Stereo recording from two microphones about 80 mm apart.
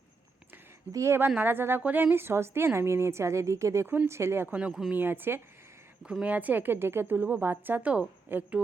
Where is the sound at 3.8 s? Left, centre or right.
Right.